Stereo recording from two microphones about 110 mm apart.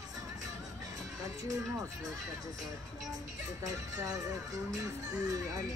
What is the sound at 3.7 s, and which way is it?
Speech, 35° right (ahead or behind).